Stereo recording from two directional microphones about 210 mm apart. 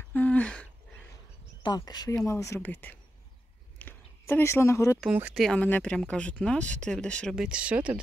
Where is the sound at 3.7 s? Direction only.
10° left (ahead or behind).